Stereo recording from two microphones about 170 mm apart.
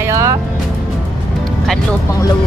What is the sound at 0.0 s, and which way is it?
Music, 15° right (ahead or behind).